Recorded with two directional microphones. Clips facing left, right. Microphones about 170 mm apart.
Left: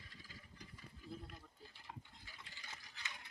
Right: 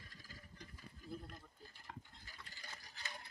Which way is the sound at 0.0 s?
45° right (ahead or behind).